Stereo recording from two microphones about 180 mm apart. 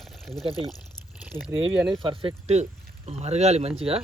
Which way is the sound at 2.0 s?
30° right (ahead or behind).